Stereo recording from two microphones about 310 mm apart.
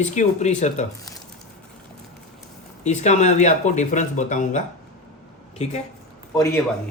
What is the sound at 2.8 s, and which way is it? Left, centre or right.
Speech, left.